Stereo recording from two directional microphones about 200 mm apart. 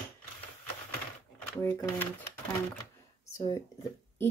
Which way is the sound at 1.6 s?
10° left (ahead or behind).